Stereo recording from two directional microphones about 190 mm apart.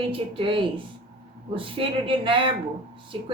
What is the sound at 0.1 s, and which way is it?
Speech, 30° right (ahead or behind).